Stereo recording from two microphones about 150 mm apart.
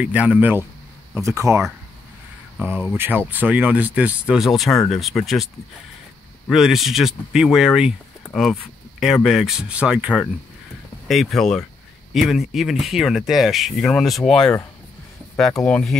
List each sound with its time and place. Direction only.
0.0 s speech: 10° right (ahead or behind)
2.6 s speech: 10° right (ahead or behind)
6.5 s speech: centre (ahead or behind)